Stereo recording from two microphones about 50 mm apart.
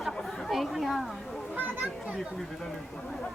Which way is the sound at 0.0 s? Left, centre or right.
Centre.